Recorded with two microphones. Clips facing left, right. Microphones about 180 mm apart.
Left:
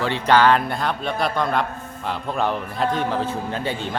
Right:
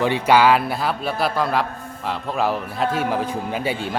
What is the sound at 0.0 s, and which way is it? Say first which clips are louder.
A man's voice: right 1 dB; 10° right (ahead or behind).